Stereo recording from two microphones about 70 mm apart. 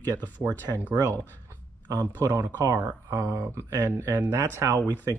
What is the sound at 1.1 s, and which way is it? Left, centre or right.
Speech, left.